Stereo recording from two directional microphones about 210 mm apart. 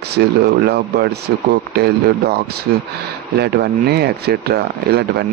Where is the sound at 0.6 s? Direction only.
50° right (ahead or behind).